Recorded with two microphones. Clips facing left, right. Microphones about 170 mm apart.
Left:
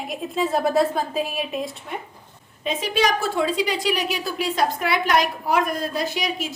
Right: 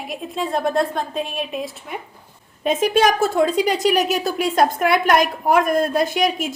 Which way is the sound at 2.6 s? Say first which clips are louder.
Right 6 dB; 50° right (ahead or behind).